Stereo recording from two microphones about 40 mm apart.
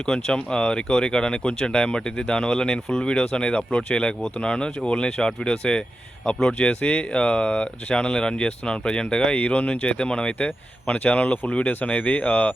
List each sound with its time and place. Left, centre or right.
0.0 s speech: centre
10.3 s speech: left
11.6 s speech: left
11.9 s speech: left